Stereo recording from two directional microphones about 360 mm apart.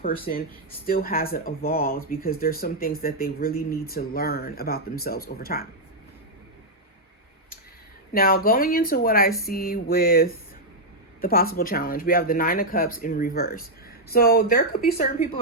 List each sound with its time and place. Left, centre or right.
0.0 s speech: left
8.1 s speech: left